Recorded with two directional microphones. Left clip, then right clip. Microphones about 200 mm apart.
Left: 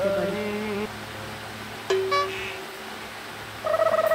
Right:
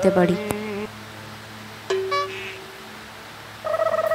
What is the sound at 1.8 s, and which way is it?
Music, centre (ahead or behind).